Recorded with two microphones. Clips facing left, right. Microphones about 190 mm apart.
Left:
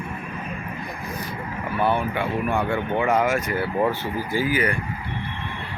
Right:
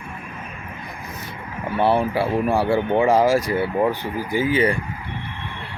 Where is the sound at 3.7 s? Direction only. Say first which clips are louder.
Right 2 dB; 15° right (ahead or behind).